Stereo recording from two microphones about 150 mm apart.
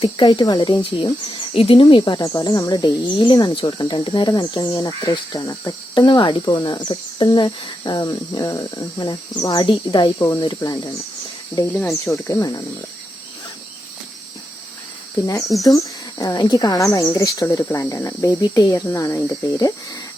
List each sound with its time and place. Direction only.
0.0 s speech: 30° left (ahead or behind)
11.7 s speech: 10° left (ahead or behind)
12.3 s speech: 25° left (ahead or behind)
16.1 s speech: 25° left (ahead or behind)